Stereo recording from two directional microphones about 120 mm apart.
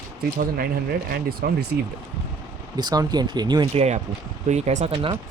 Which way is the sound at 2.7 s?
35° right (ahead or behind).